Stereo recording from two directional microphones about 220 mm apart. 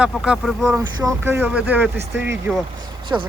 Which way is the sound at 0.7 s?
15° right (ahead or behind).